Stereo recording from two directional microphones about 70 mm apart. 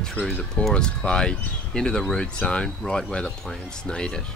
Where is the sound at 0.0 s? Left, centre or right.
Centre.